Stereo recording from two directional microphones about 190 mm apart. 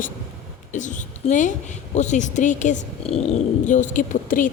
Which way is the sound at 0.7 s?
40° left (ahead or behind).